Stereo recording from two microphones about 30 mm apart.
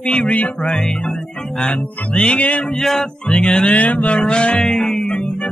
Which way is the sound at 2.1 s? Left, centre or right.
Left.